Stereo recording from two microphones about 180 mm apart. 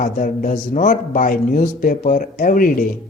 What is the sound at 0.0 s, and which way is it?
Speech, 45° left (ahead or behind).